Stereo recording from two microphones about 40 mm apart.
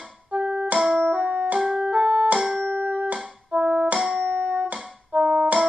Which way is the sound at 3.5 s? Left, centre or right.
Right.